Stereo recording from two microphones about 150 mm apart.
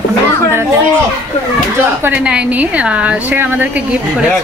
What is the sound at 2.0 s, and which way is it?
A woman's voice, 10° right (ahead or behind).